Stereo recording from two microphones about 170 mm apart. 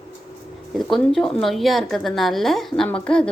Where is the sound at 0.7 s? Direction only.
Centre (ahead or behind).